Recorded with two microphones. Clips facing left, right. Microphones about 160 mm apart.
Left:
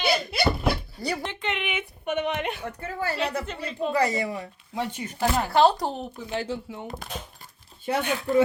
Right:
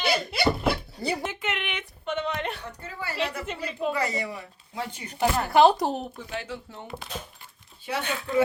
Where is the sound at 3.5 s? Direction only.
5° right (ahead or behind).